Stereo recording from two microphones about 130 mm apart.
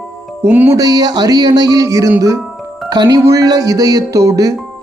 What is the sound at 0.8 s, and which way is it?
Speech, 30° right (ahead or behind).